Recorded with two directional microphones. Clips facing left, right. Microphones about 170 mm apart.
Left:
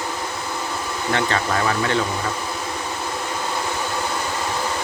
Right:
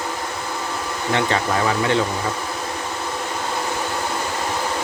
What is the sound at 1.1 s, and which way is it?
Speech, 20° right (ahead or behind).